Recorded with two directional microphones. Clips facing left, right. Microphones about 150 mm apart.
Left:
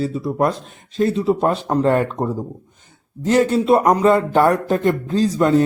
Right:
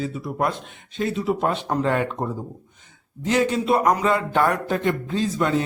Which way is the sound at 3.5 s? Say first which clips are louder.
Left 5 dB; 40° left (ahead or behind).